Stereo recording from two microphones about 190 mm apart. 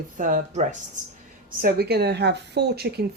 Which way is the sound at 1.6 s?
55° right (ahead or behind).